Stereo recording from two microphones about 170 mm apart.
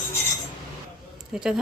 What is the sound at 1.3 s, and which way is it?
Speech, 5° right (ahead or behind).